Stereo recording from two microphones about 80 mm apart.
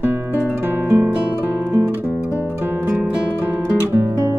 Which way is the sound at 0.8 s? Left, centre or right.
Right.